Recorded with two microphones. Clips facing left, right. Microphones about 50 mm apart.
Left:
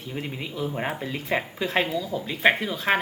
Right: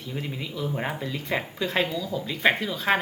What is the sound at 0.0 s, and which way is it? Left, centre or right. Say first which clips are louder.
Speech: even; centre.